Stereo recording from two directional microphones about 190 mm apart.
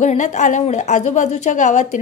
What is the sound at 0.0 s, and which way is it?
A woman's voice, 40° left (ahead or behind).